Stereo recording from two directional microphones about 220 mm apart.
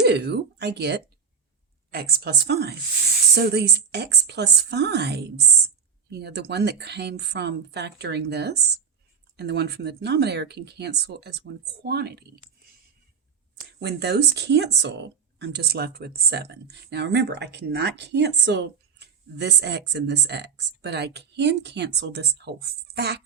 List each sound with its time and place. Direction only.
0.0 s speech: 50° right (ahead or behind)
13.7 s speech: 50° right (ahead or behind)